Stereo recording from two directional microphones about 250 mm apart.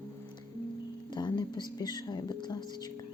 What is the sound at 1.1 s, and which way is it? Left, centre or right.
Speech, centre.